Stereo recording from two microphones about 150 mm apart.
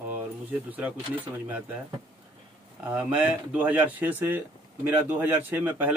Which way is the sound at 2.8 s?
10° right (ahead or behind).